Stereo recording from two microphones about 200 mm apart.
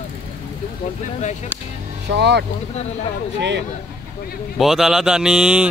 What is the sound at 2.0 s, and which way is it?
Speech, 60° right (ahead or behind).